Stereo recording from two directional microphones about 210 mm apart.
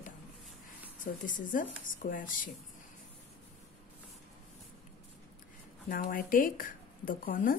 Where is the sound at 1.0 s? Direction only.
40° left (ahead or behind).